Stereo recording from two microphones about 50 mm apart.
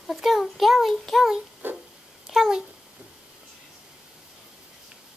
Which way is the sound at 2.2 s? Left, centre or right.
Centre.